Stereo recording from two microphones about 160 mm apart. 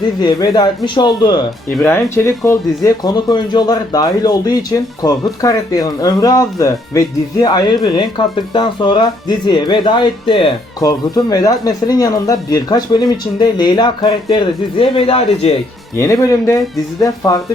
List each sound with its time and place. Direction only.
0.2 s speech: 25° left (ahead or behind)
1.8 s speech: 15° left (ahead or behind); by 10.5 s 35° left (ahead or behind)
10.8 s speech: 25° left (ahead or behind)
16.0 s speech: 20° left (ahead or behind)